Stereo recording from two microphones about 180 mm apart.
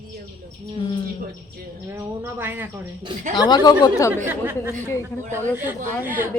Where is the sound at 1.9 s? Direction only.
10° right (ahead or behind).